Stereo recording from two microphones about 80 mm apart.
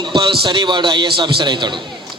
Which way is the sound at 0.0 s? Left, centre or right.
Right.